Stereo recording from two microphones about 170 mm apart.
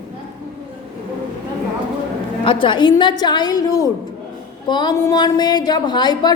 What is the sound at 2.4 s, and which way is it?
A woman's voice, 30° left (ahead or behind).